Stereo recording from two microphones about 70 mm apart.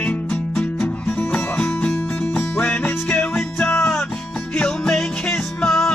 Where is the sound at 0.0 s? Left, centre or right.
Centre.